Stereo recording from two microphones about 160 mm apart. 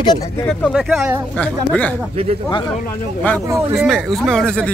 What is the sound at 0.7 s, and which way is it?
Speech, centre (ahead or behind).